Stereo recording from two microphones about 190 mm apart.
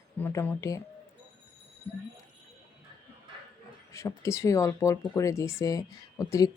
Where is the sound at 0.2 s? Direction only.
10° left (ahead or behind).